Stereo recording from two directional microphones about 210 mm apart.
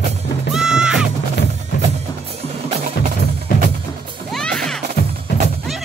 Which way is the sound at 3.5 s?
40° left (ahead or behind).